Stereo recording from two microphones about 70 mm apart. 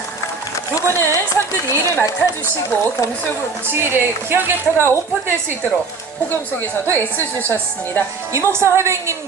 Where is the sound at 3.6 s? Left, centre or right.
Right.